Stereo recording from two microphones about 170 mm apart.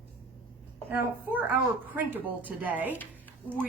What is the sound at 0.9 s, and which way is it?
A woman's voice, 10° right (ahead or behind).